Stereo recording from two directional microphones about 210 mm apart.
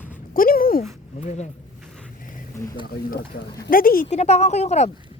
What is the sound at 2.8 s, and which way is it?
Speech, 45° left (ahead or behind).